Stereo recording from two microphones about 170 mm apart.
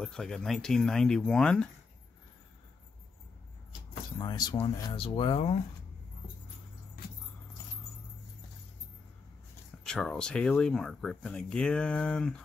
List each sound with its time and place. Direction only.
0.0 s speech: 5° left (ahead or behind)
4.2 s speech: 25° left (ahead or behind)
9.8 s speech: 5° left (ahead or behind)